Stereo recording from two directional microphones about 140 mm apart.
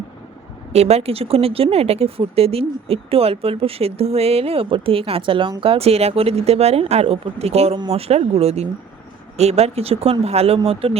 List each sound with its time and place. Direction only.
0.7 s speech: 50° right (ahead or behind)